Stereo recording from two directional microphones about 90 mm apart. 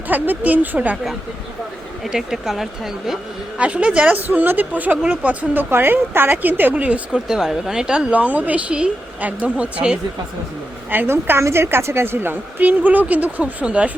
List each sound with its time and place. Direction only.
0.1 s a woman's voice: 20° right (ahead or behind)
2.0 s speech: 5° right (ahead or behind)
3.6 s speech: 15° right (ahead or behind)
10.9 s a woman's voice: 25° right (ahead or behind)